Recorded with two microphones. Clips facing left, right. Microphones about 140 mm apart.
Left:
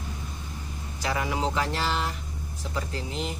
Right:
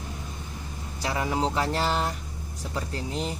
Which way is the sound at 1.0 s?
35° right (ahead or behind).